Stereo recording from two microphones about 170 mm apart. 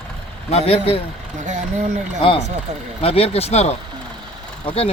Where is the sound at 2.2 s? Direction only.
30° left (ahead or behind).